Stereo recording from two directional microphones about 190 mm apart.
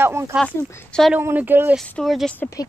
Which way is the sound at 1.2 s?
10° right (ahead or behind).